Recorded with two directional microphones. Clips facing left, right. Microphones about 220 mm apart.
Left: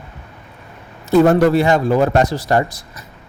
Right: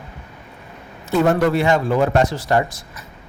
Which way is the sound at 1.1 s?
35° left (ahead or behind).